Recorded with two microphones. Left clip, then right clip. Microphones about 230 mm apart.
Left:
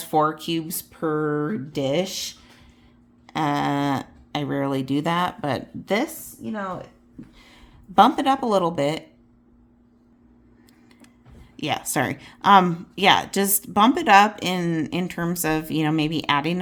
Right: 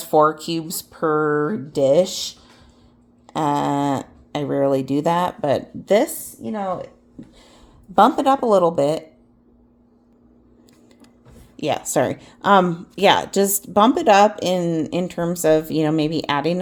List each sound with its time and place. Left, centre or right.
0.0 s speech: centre
0.5 s speech: left
1.7 s speech: centre
2.0 s speech: left
3.2 s speech: centre
11.5 s speech: centre
15.7 s speech: left
16.1 s speech: centre